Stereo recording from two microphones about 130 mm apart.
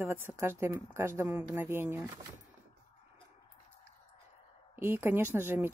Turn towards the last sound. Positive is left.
turn(degrees=-20)  # may be behind; listen again after turning